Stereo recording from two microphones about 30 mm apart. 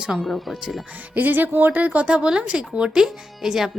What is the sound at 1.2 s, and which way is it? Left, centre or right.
Speech, right.